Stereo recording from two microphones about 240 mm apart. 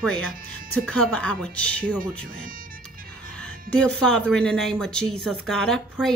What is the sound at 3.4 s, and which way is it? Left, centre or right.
Speech, centre.